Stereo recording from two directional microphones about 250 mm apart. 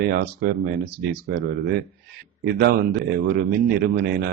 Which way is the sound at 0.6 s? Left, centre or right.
Right.